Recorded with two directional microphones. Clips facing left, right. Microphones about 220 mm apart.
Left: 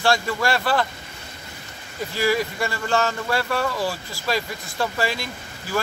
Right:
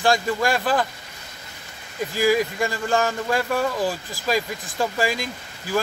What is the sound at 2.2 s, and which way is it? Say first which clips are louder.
Speech: right 2 dB; 15° right (ahead or behind).